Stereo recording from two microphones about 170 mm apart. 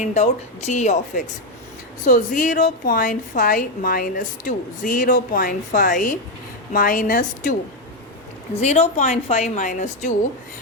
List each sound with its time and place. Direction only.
0.0 s a woman's voice: 40° left (ahead or behind)
8.6 s a woman's voice: 40° left (ahead or behind)